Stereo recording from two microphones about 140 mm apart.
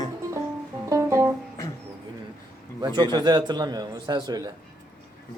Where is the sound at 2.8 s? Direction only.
30° right (ahead or behind).